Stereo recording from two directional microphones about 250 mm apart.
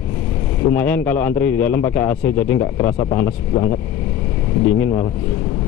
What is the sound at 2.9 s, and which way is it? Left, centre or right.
Speech, left.